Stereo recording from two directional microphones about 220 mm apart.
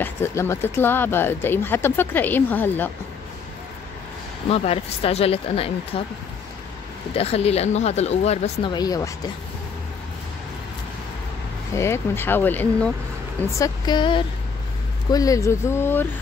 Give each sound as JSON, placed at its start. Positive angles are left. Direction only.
{"t": 0.0, "sound": "speech", "side_deg": 10}
{"t": 4.5, "sound": "speech", "side_deg": 25}
{"t": 7.2, "sound": "speech", "side_deg": 25}
{"t": 11.7, "sound": "speech", "side_deg": 10}
{"t": 13.6, "sound": "speech", "side_deg": 20}